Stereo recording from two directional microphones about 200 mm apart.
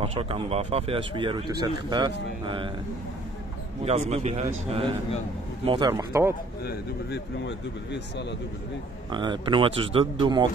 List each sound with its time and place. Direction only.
0.0 s speech: 30° right (ahead or behind)
4.1 s a man's voice: 30° right (ahead or behind); by 6.3 s 15° right (ahead or behind)
6.6 s speech: 55° left (ahead or behind)
9.1 s speech: 25° right (ahead or behind)